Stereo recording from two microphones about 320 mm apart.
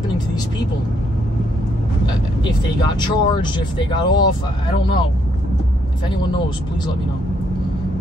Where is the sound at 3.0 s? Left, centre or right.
Centre.